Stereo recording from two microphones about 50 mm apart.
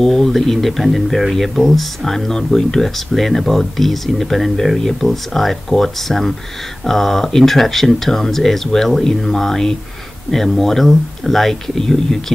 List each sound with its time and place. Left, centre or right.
0.0 s speech: centre